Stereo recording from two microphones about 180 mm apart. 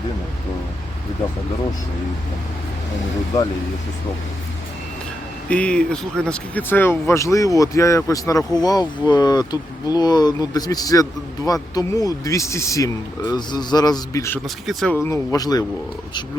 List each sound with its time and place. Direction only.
5.5 s speech: 5° left (ahead or behind)
14.4 s speech: centre (ahead or behind)
14.9 s speech: 15° left (ahead or behind)